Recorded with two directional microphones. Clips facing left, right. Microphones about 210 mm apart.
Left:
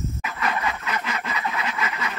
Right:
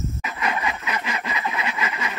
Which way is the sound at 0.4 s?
10° right (ahead or behind).